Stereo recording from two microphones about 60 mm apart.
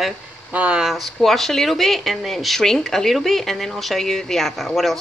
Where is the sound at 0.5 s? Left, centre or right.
Right.